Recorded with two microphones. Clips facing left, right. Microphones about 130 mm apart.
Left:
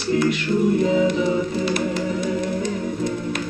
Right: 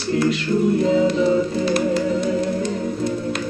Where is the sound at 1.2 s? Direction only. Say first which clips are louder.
Right 3 dB; 30° right (ahead or behind).